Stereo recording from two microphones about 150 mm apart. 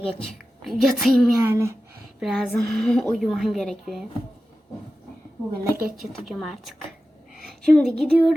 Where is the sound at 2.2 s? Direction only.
Centre (ahead or behind).